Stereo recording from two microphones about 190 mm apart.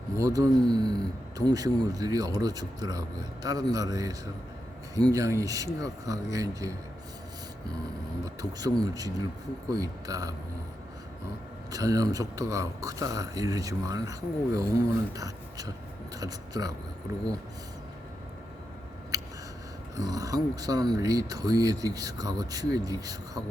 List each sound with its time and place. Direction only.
0.2 s speech: 20° right (ahead or behind)
8.2 s speech: 20° right (ahead or behind)
11.7 s speech: 20° right (ahead or behind)
19.1 s a sound: 15° right (ahead or behind)
20.0 s speech: 20° right (ahead or behind)